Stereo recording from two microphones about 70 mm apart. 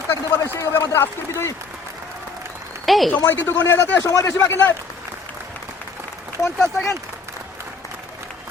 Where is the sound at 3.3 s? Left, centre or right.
Left.